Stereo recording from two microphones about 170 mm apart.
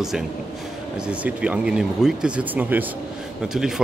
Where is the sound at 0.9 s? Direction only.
5° right (ahead or behind).